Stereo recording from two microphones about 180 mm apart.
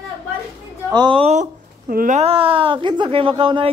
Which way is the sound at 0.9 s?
25° right (ahead or behind).